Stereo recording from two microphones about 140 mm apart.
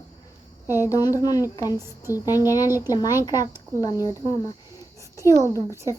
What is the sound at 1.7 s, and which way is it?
Speech, 20° right (ahead or behind).